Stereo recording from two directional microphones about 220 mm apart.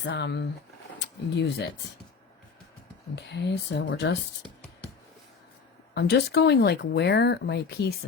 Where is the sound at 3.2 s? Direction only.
50° left (ahead or behind).